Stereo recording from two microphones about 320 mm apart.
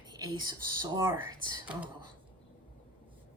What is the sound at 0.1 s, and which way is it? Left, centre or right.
Speech, centre.